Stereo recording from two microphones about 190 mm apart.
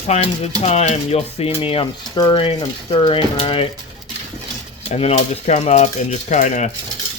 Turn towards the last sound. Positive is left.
turn(degrees=40)  # may be behind; listen again after turning